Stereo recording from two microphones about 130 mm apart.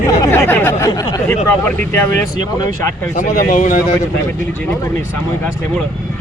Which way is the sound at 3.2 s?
75° left (ahead or behind).